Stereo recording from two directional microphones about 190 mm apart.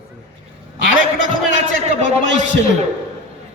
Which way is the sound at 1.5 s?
40° right (ahead or behind).